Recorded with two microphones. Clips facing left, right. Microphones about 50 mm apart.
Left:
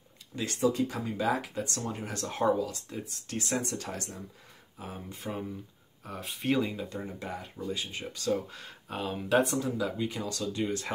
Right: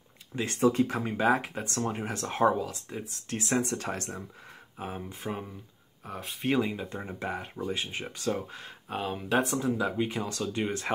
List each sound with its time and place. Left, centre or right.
0.6 s speech: right
2.7 s speech: centre
3.5 s speech: right
5.2 s speech: centre
6.0 s speech: centre
6.7 s speech: right; by 9.6 s centre
9.6 s speech: right